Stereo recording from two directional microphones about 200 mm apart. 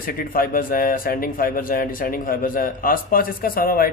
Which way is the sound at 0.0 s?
45° left (ahead or behind).